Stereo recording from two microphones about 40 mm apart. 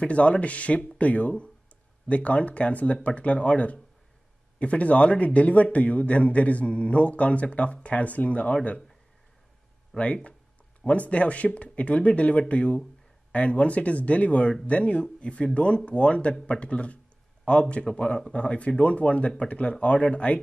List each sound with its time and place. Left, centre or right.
0.0 s a man's voice: left
9.9 s a man's voice: left